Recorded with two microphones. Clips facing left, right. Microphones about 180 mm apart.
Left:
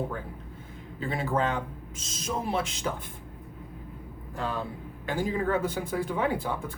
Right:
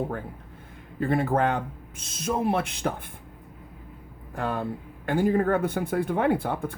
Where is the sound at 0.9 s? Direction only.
55° right (ahead or behind).